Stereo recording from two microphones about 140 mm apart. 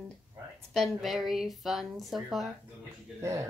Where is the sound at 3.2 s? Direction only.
20° right (ahead or behind).